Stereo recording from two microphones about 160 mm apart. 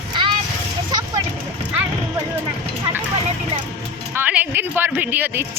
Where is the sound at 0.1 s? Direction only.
30° right (ahead or behind).